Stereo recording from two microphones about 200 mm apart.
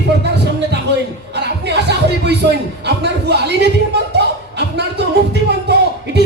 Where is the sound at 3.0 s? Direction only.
55° right (ahead or behind).